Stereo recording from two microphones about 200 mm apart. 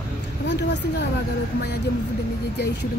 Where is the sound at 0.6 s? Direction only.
60° left (ahead or behind).